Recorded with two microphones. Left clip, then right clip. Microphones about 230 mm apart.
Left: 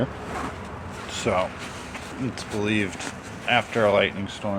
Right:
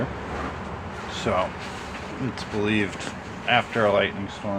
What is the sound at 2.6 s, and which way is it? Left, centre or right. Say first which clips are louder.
Speech: right 1 dB; centre.